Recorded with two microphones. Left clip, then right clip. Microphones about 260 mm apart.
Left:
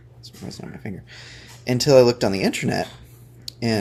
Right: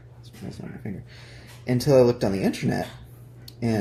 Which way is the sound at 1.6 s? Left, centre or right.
Left.